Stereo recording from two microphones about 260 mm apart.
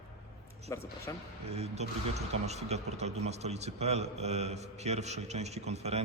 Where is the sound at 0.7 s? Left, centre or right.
Centre.